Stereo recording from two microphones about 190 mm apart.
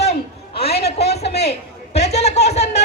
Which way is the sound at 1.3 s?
60° left (ahead or behind).